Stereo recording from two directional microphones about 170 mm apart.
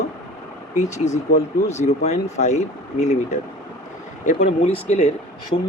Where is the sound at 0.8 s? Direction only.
45° left (ahead or behind).